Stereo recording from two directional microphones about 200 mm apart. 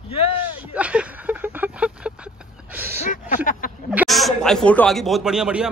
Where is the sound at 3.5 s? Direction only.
45° left (ahead or behind).